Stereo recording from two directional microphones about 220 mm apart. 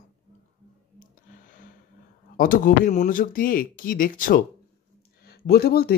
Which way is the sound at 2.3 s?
40° left (ahead or behind).